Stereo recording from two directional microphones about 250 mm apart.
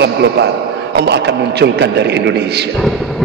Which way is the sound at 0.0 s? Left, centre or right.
Right.